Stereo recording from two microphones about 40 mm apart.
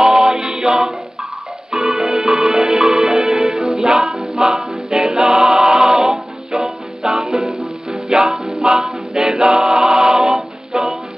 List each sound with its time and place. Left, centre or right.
0.0 s music: centre
4.9 s a capella: centre
6.5 s music: centre
8.6 s a capella: centre